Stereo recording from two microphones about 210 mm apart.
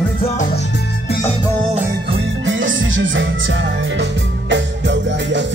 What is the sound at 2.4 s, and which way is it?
Music, 65° right (ahead or behind).